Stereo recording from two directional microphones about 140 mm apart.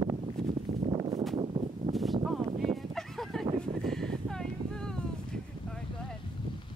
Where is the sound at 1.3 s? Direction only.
40° right (ahead or behind).